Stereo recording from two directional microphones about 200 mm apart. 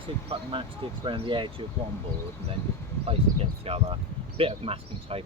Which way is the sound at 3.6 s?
30° right (ahead or behind).